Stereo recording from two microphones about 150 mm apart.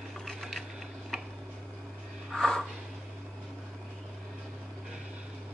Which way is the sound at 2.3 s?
5° left (ahead or behind).